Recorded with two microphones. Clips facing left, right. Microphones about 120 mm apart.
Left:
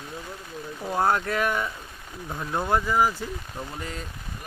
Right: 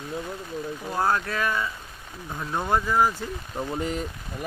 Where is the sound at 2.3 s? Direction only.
5° left (ahead or behind).